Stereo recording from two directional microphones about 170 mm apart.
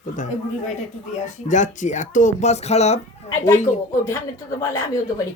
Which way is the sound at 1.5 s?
45° left (ahead or behind).